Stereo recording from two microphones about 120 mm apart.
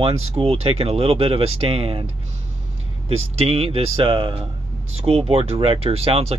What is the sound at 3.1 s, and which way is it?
Speech, 55° right (ahead or behind).